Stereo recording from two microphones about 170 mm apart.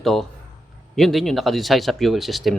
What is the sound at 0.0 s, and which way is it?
A man's voice, centre (ahead or behind).